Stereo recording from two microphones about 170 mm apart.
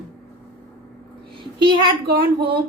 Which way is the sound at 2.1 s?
70° right (ahead or behind).